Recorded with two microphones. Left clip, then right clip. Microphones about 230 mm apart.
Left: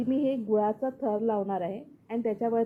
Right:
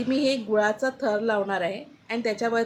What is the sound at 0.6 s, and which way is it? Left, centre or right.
A woman's voice, centre.